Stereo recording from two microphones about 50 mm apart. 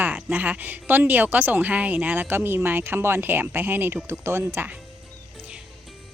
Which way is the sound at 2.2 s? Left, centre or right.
Right.